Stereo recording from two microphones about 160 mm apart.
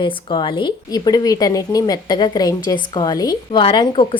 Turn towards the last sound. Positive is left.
turn(degrees=30)  # may be behind; listen again after turning